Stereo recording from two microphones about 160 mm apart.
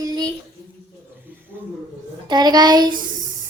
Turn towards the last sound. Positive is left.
turn(degrees=-25)  # may be behind; listen again after turning